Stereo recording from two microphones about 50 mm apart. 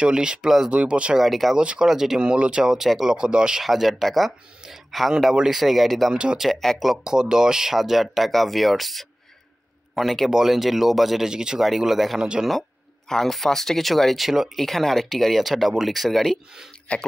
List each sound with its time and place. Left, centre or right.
0.0 s speech: centre
1.1 s speech: centre
1.5 s speech: centre
3.6 s speech: centre
5.3 s speech: centre
5.6 s speech: centre
6.1 s speech: centre
6.4 s speech: centre
6.8 s speech: centre
14.6 s speech: centre
16.9 s speech: left